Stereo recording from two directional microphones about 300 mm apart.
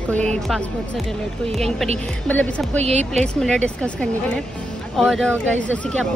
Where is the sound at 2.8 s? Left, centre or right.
Right.